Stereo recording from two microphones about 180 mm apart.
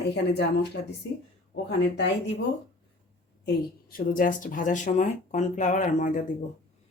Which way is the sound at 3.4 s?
50° left (ahead or behind).